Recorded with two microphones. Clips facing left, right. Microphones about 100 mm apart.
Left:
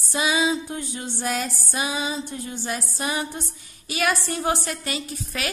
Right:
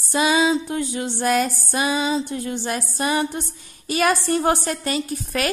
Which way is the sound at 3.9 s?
40° right (ahead or behind).